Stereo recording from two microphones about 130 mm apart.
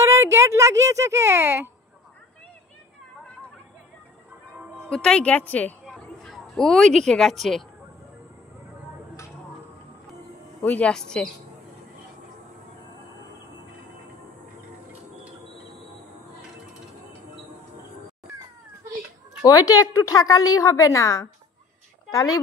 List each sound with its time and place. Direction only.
0.0 s speech: 20° right (ahead or behind)
4.8 s a woman's voice: 5° left (ahead or behind)
5.9 s a sound: centre (ahead or behind)
10.6 s a woman's voice: 10° left (ahead or behind)
19.4 s a woman's voice: 30° left (ahead or behind)